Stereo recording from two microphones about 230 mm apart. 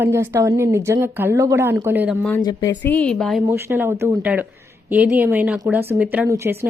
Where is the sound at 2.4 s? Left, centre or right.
Centre.